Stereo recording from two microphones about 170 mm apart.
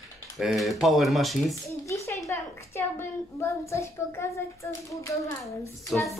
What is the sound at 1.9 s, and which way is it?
A woman's voice, 20° left (ahead or behind).